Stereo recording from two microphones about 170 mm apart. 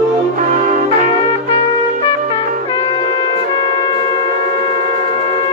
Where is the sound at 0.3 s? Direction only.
55° right (ahead or behind).